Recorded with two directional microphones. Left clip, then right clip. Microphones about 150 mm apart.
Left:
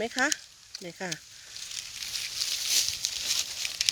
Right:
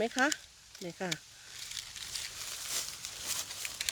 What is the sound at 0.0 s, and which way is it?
Speech, centre (ahead or behind).